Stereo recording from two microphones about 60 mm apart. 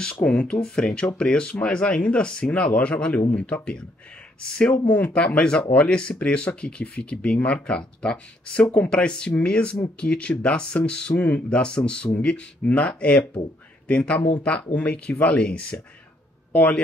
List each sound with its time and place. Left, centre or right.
0.0 s speech: centre
11.6 s speech: centre